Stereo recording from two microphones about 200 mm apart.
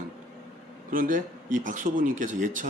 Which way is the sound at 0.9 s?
40° right (ahead or behind).